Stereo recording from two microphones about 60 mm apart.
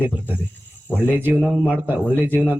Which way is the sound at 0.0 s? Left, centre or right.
Right.